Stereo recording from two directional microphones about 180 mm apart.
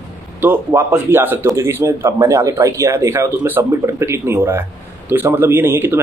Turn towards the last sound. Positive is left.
turn(degrees=-10)  # may be behind; listen again after turning